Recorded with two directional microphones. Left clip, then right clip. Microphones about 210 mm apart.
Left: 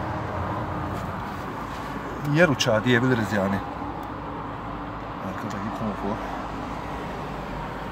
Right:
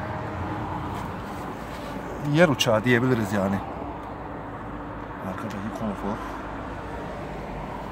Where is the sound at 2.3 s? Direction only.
15° right (ahead or behind).